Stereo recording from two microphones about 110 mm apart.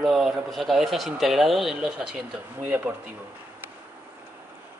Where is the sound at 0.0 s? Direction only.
Centre (ahead or behind).